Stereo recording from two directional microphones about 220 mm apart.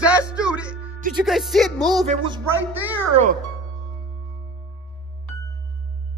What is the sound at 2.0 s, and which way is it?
Speech, 20° right (ahead or behind).